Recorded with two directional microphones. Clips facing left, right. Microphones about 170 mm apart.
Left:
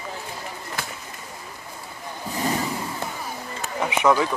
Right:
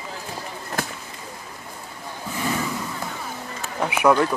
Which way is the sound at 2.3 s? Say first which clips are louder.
Left 1 dB; 35° left (ahead or behind).